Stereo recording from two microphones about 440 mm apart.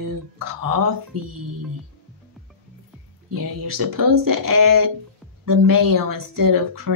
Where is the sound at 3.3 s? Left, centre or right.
Right.